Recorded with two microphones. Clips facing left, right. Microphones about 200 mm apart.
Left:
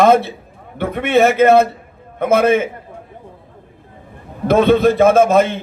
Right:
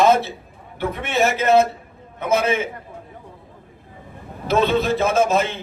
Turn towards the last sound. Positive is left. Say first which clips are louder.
# left 7 dB
turn(degrees=55)  # may be behind; listen again after turning